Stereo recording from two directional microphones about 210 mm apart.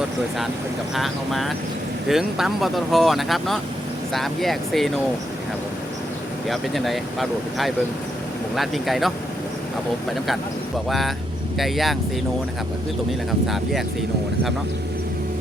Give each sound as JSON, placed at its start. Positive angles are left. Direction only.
{"t": 0.9, "sound": "speech", "side_deg": 0}
{"t": 6.5, "sound": "speech", "side_deg": 0}
{"t": 10.8, "sound": "speech", "side_deg": 0}